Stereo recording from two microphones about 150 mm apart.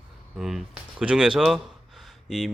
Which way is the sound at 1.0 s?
5° right (ahead or behind).